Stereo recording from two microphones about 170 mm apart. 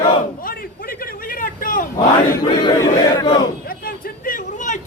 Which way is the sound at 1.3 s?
55° left (ahead or behind).